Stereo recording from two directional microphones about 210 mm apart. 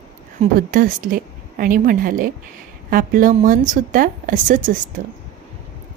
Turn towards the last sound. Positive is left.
turn(degrees=-40)  # may be behind; listen again after turning